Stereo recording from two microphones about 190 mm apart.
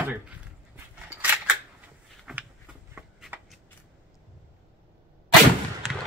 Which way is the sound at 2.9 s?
5° right (ahead or behind).